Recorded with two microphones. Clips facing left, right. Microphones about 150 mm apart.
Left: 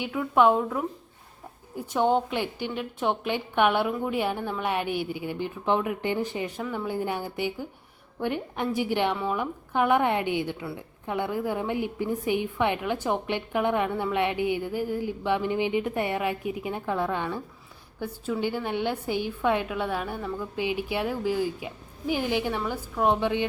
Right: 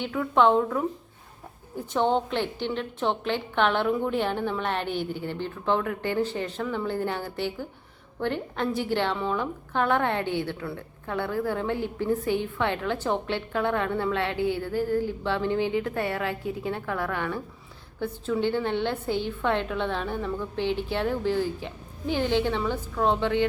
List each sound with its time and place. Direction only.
0.0 s speech: 10° left (ahead or behind)
1.9 s a woman's voice: 10° left (ahead or behind)